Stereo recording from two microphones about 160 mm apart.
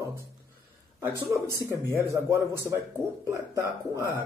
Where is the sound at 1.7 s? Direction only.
20° right (ahead or behind).